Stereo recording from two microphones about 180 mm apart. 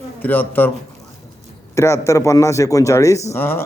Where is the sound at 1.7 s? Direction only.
15° left (ahead or behind).